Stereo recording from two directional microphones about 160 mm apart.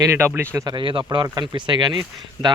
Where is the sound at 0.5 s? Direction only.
25° right (ahead or behind).